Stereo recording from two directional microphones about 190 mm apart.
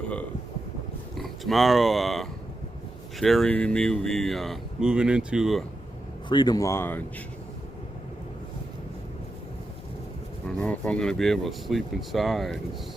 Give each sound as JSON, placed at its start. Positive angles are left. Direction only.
{"t": 1.1, "sound": "speech", "side_deg": 0}
{"t": 6.2, "sound": "speech", "side_deg": 25}
{"t": 10.6, "sound": "speech", "side_deg": 5}